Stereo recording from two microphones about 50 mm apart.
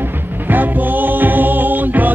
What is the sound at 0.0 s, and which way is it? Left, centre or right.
Music, right.